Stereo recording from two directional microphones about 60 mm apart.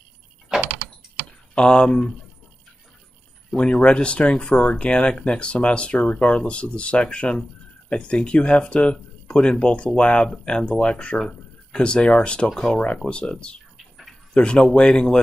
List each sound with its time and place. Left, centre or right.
0.5 s door: centre
1.5 s speech: centre
3.5 s speech: centre